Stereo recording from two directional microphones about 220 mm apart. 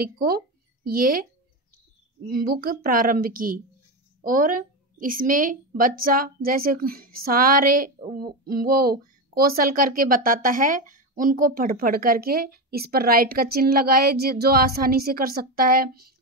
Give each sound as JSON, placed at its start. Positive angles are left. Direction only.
{"t": 0.0, "sound": "a woman's voice", "side_deg": -45}
{"t": 2.2, "sound": "a woman's voice", "side_deg": -45}